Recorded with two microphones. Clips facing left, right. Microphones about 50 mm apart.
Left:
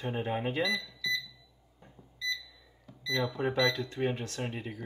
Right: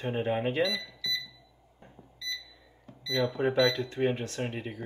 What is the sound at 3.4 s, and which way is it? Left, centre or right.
Speech, right.